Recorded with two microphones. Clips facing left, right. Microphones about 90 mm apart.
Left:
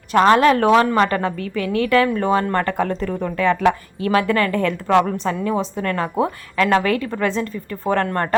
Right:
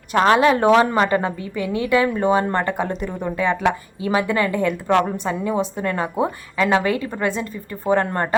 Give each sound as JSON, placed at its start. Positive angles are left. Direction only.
{"t": 0.1, "sound": "speech", "side_deg": -10}